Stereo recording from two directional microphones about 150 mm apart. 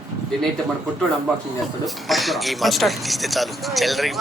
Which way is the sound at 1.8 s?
Centre (ahead or behind).